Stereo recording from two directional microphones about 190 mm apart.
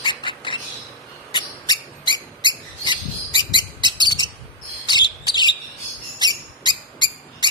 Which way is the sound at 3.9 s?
25° left (ahead or behind).